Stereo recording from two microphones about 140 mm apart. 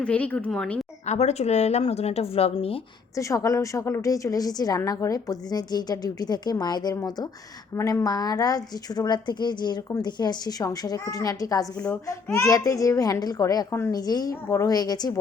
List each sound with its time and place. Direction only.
0.0 s a woman's voice: 10° left (ahead or behind)
1.0 s speech: 55° left (ahead or behind)
3.2 s a woman's voice: 25° left (ahead or behind)